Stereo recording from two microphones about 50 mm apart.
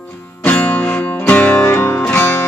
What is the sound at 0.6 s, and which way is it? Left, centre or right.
Music, left.